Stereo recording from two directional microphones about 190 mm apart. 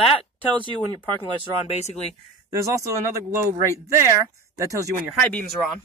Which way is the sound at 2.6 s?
15° right (ahead or behind).